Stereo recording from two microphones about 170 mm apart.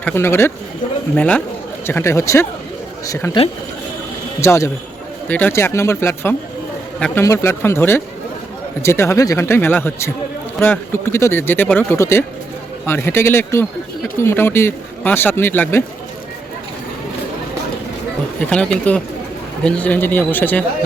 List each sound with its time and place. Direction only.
0.0 s speech: 15° left (ahead or behind)
4.4 s speech: 15° left (ahead or behind)
18.3 s speech: 5° left (ahead or behind)